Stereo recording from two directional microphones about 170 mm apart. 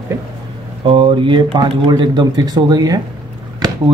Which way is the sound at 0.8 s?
30° right (ahead or behind).